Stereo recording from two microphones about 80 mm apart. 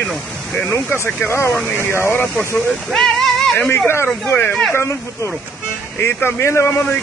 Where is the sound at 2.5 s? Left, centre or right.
Centre.